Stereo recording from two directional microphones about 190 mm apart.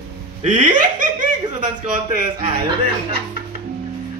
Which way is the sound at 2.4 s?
30° right (ahead or behind).